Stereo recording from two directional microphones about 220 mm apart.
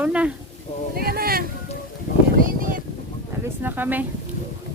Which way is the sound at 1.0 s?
45° right (ahead or behind).